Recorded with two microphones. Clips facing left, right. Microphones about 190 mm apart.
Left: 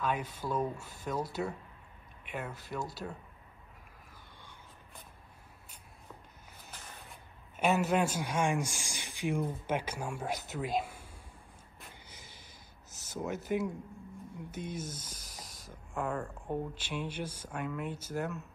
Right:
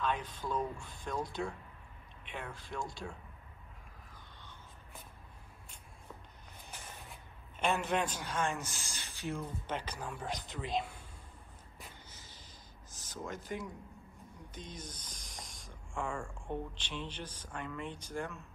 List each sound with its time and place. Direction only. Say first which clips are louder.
0.0 s speech: left 2 dB; 10° left (ahead or behind)
7.5 s speech: left 4 dB; 5° left (ahead or behind)
12.1 s snort: left 2 dB; 10° left (ahead or behind)
13.0 s speech: left 6 dB; 10° left (ahead or behind)
14.7 s speech: left 7 dB; 5° left (ahead or behind)